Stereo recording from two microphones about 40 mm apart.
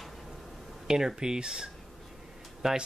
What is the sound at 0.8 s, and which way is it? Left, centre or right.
Speech, centre.